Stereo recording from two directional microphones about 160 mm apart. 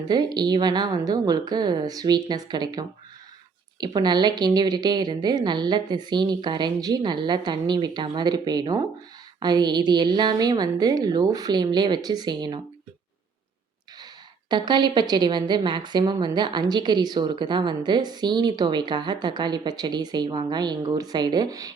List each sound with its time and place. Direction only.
0.1 s a woman's voice: 25° right (ahead or behind)
3.9 s a woman's voice: 25° right (ahead or behind)
14.5 s a woman's voice: 25° right (ahead or behind)